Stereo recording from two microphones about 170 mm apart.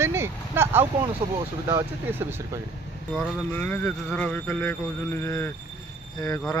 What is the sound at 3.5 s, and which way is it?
Speech, 10° left (ahead or behind).